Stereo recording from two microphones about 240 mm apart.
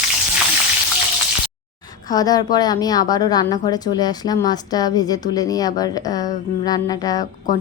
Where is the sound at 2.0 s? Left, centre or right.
Centre.